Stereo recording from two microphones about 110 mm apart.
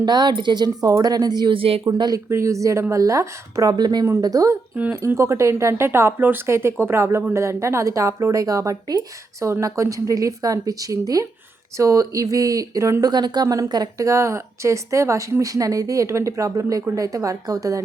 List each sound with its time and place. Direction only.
0.0 s a woman's voice: 40° right (ahead or behind)
1.5 s a woman's voice: 55° right (ahead or behind)
1.8 s a woman's voice: 35° right (ahead or behind)